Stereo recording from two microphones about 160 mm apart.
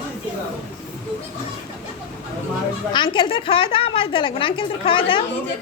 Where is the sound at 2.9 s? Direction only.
30° left (ahead or behind).